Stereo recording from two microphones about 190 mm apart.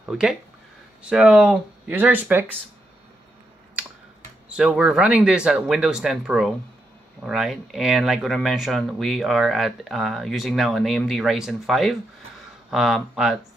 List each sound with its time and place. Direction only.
0.1 s speech: 5° right (ahead or behind)
4.5 s speech: 5° right (ahead or behind)